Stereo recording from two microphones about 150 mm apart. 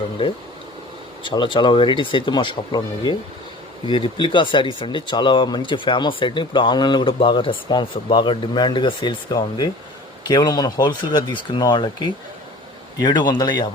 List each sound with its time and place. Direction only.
1.2 s speech: 35° left (ahead or behind)